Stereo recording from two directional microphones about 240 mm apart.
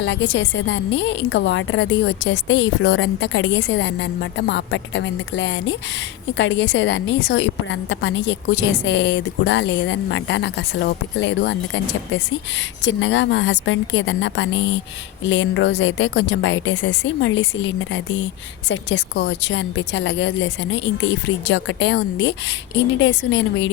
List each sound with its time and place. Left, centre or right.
0.0 s a woman's voice: left